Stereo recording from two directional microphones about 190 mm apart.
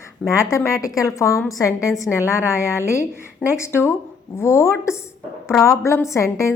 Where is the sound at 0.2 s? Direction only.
5° left (ahead or behind).